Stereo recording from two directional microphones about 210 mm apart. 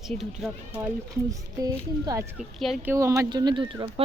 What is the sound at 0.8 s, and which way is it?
Speech, 15° right (ahead or behind).